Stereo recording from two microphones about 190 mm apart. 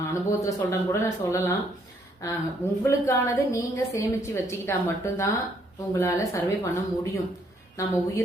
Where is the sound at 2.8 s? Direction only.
15° left (ahead or behind).